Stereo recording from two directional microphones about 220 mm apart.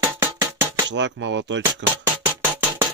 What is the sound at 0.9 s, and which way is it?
Speech, 55° right (ahead or behind).